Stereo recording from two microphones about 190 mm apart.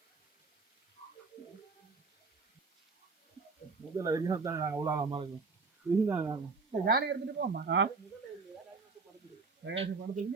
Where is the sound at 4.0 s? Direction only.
20° right (ahead or behind).